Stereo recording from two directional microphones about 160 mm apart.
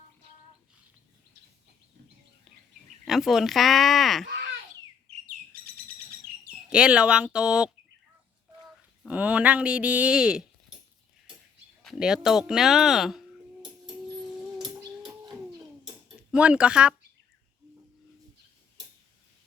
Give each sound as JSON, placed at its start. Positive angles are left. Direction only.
{"t": 3.1, "sound": "speech", "side_deg": 0}
{"t": 5.1, "sound": "chirp", "side_deg": -40}
{"t": 5.5, "sound": "bird", "side_deg": -65}
{"t": 6.7, "sound": "speech", "side_deg": -5}
{"t": 9.0, "sound": "speech", "side_deg": -10}
{"t": 11.8, "sound": "a sound", "side_deg": 0}
{"t": 16.3, "sound": "speech", "side_deg": -5}